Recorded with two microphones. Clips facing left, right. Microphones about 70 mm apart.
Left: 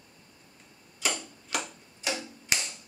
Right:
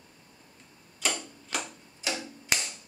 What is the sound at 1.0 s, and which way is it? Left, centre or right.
Tick-tock, centre.